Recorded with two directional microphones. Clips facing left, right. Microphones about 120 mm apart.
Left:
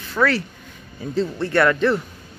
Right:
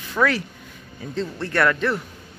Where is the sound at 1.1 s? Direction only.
Centre (ahead or behind).